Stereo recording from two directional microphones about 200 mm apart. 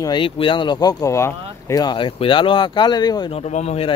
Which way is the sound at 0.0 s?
25° left (ahead or behind).